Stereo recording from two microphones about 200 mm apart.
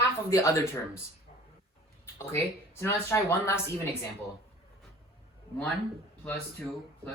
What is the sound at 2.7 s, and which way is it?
Speech, 10° left (ahead or behind).